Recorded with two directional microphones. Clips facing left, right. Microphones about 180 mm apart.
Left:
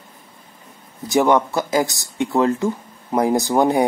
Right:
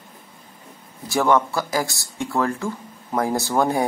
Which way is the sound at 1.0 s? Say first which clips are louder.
Left 3 dB; 20° left (ahead or behind).